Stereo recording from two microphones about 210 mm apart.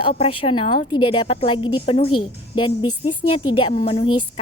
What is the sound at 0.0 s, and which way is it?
A woman's voice, 25° left (ahead or behind).